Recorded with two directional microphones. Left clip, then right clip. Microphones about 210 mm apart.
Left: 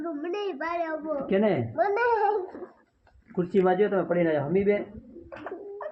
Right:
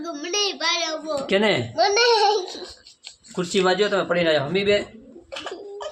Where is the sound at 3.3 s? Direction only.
5° right (ahead or behind).